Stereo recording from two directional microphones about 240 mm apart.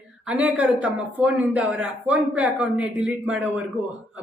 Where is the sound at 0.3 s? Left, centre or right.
Centre.